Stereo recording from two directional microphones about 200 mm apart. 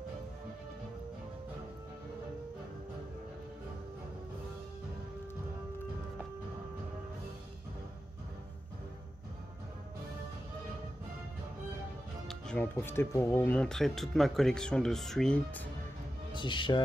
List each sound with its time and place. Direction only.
12.3 s speech: 5° left (ahead or behind)
16.3 s speech: 25° left (ahead or behind)